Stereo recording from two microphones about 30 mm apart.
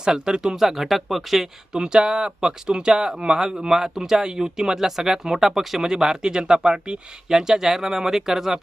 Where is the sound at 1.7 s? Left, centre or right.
Right.